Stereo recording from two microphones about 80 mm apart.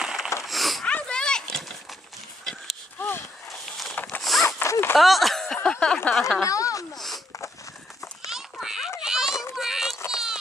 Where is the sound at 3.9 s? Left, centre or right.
Left.